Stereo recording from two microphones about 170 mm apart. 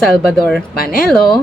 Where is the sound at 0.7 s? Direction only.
60° left (ahead or behind).